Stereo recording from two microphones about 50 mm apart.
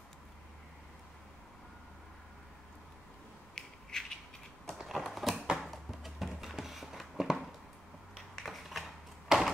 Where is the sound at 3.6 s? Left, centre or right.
Centre.